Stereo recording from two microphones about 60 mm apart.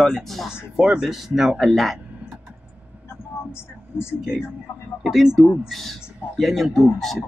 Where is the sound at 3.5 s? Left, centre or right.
Left.